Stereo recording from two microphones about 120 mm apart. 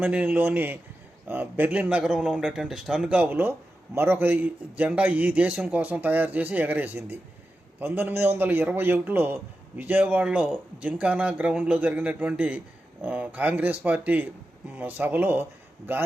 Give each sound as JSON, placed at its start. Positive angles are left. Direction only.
{"t": 0.0, "sound": "a man's voice", "side_deg": -10}